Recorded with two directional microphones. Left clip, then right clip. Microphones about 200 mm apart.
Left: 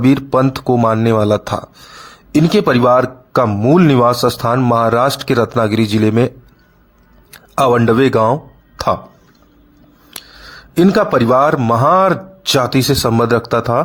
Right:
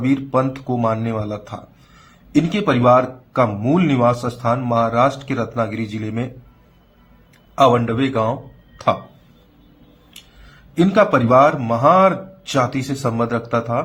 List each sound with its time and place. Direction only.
0.0 s speech: 50° left (ahead or behind)
10.8 s speech: 50° left (ahead or behind)